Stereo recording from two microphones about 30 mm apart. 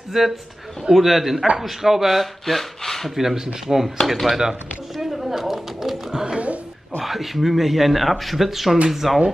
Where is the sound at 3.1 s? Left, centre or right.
Centre.